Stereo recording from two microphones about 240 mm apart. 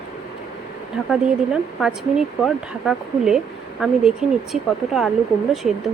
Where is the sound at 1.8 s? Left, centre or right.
Centre.